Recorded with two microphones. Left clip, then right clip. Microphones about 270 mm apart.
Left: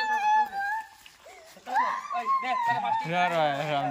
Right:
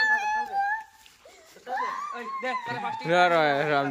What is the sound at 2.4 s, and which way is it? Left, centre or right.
Speech, centre.